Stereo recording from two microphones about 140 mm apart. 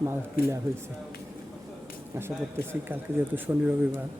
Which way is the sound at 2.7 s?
15° right (ahead or behind).